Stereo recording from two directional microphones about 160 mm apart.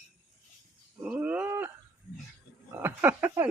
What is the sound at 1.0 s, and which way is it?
Speech, 10° right (ahead or behind).